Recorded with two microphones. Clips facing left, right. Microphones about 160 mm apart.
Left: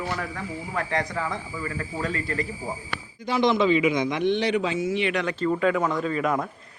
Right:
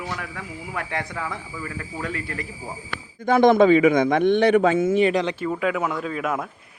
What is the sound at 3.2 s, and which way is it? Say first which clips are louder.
A man's voice: right 6 dB; 50° right (ahead or behind).